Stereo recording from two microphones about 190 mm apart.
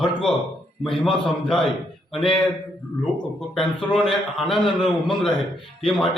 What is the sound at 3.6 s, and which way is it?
Speech, 5° left (ahead or behind).